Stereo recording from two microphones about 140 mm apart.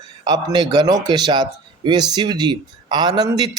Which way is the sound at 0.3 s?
30° right (ahead or behind).